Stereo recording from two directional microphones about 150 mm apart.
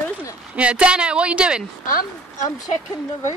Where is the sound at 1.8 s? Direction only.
70° left (ahead or behind).